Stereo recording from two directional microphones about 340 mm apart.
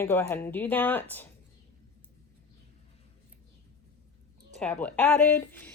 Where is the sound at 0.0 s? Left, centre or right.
Centre.